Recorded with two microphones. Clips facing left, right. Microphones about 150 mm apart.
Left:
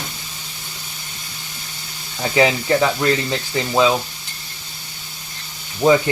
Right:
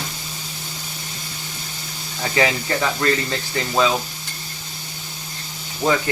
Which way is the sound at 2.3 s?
15° left (ahead or behind).